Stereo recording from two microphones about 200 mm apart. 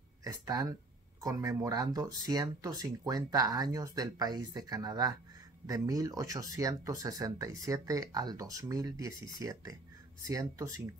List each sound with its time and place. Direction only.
0.2 s speech: 20° right (ahead or behind)